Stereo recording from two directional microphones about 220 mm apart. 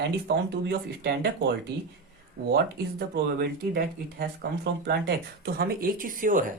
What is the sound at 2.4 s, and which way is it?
Speech, 40° right (ahead or behind).